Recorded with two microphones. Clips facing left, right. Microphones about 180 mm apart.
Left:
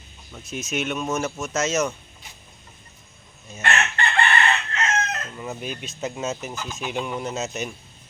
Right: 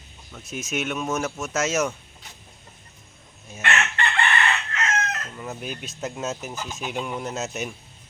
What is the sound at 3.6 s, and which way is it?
Chicken, 35° left (ahead or behind).